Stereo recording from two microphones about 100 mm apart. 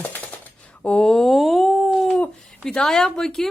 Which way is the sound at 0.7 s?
10° left (ahead or behind).